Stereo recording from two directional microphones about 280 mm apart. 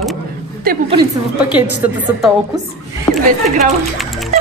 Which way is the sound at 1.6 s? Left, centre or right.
Centre.